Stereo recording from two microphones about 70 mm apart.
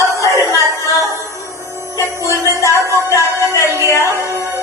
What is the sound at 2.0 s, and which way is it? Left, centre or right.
Music, left.